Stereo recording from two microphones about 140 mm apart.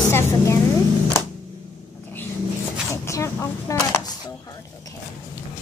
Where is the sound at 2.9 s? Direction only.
20° left (ahead or behind).